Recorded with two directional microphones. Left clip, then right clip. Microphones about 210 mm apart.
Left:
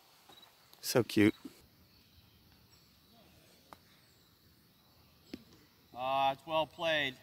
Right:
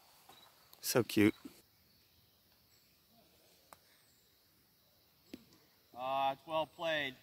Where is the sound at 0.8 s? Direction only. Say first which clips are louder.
Left 2 dB; centre (ahead or behind).